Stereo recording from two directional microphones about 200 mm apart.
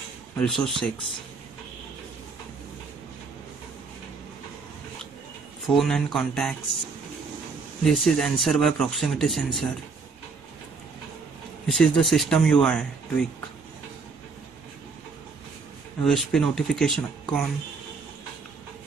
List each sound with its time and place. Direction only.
0.4 s speech: centre (ahead or behind)
5.7 s speech: centre (ahead or behind)
7.8 s speech: centre (ahead or behind)
11.6 s speech: 5° left (ahead or behind)
16.0 s speech: centre (ahead or behind)